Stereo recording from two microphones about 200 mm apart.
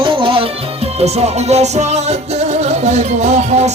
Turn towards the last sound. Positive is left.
turn(degrees=-35)  # may be behind; listen again after turning